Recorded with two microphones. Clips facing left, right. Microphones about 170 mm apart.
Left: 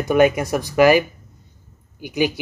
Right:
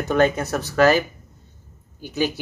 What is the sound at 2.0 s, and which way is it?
Speech, 15° left (ahead or behind).